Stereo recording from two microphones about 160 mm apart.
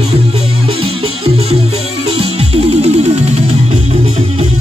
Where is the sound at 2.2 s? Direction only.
40° right (ahead or behind).